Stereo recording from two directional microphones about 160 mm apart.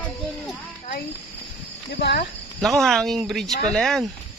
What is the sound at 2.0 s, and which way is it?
Speech, 90° left.